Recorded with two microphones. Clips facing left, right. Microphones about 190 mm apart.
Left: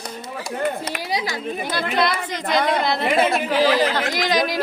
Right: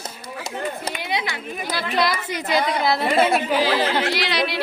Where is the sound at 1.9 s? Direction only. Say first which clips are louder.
Right 1 dB; 5° right (ahead or behind).